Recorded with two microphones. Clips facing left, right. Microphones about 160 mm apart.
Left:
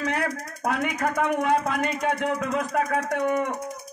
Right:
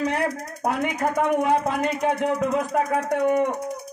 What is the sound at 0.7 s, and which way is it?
Speech, 30° right (ahead or behind).